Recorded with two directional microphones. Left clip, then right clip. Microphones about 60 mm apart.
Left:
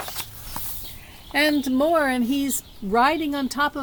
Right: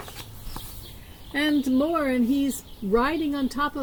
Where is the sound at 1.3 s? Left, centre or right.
Left.